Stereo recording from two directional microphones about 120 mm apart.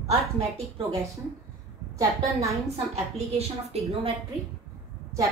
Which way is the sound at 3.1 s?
60° right (ahead or behind).